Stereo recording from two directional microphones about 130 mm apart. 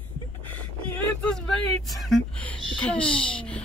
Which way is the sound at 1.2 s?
Centre (ahead or behind).